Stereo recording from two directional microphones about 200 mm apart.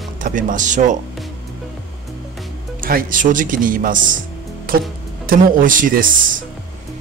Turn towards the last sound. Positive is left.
turn(degrees=-40)  # may be behind; listen again after turning